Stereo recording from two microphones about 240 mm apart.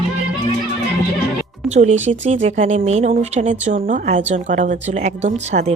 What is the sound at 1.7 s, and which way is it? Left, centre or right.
A woman's voice, right.